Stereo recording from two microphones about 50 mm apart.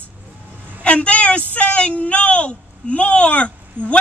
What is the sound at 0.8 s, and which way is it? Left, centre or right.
A woman's voice, left.